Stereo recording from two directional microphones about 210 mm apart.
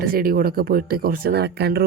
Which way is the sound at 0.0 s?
45° right (ahead or behind).